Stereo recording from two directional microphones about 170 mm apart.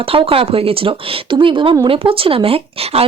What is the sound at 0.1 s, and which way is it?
Speech, 30° right (ahead or behind).